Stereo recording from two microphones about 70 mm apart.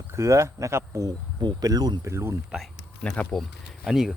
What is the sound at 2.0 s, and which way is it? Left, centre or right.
Speech, right.